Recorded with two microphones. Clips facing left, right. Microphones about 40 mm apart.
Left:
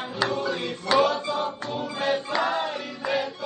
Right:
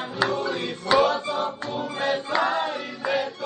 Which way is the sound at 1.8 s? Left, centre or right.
Right.